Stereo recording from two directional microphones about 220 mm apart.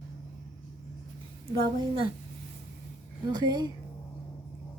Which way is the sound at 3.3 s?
20° right (ahead or behind).